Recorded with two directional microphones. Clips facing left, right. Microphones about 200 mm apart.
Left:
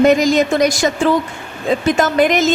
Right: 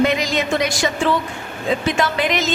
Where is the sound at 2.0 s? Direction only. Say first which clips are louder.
Left 6 dB; 45° left (ahead or behind).